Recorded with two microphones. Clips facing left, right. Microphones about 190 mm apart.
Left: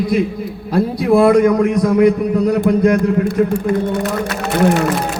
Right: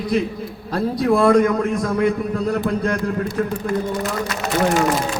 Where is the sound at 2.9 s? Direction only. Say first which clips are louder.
Left 7 dB; 55° left (ahead or behind).